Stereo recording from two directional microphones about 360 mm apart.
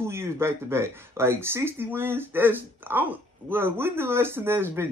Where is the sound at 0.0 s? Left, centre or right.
Centre.